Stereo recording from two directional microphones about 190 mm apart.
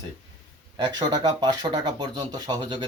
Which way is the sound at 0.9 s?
20° right (ahead or behind).